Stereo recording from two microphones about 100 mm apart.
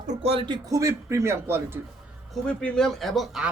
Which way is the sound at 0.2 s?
80° right.